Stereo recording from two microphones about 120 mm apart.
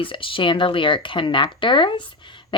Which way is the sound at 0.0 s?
45° left (ahead or behind).